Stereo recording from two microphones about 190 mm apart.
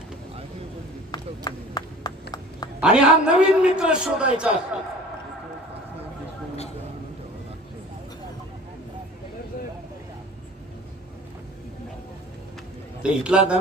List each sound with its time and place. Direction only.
1.1 s run: 20° left (ahead or behind)
2.8 s a man's voice: 5° right (ahead or behind)
13.0 s a man's voice: 5° right (ahead or behind)